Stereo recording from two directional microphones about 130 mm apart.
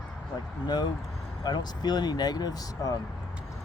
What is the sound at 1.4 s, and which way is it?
Speech, 35° left (ahead or behind).